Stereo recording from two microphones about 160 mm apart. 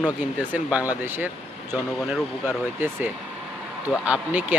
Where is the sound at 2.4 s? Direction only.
10° right (ahead or behind).